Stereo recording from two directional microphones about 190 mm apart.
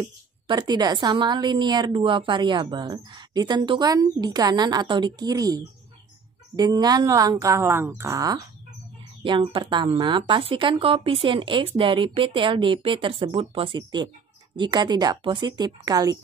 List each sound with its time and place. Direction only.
0.0 s a woman's voice: 20° right (ahead or behind)